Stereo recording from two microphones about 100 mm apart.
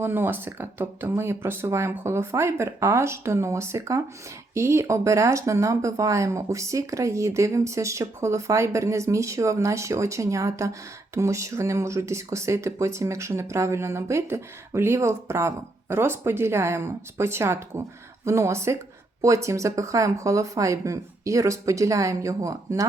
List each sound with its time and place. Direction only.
0.0 s speech: 20° right (ahead or behind)